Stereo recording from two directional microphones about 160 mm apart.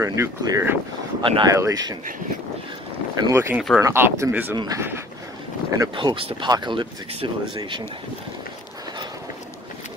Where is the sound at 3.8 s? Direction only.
20° right (ahead or behind).